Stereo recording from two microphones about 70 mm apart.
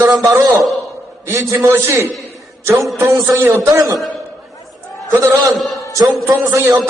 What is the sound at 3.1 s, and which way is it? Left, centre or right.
Speech, right.